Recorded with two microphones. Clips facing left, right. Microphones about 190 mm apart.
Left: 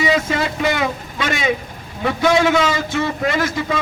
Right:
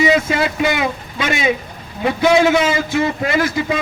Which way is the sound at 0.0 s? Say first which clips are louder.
Right 3 dB; 15° right (ahead or behind).